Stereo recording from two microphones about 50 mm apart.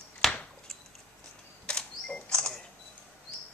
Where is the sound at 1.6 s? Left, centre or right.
Centre.